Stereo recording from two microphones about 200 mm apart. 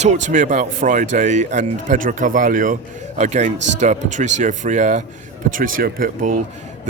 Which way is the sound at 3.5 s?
65° right (ahead or behind).